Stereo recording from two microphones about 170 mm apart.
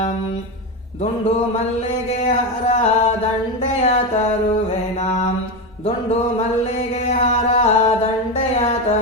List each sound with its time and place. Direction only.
2.0 s music: 40° left (ahead or behind)
7.1 s music: 40° left (ahead or behind)